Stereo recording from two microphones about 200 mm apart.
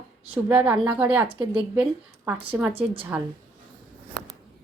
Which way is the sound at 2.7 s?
25° right (ahead or behind).